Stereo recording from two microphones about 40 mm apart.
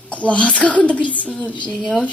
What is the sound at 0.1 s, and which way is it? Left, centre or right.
A woman's voice, left.